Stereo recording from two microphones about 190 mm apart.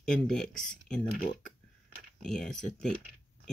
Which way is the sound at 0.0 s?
5° left (ahead or behind).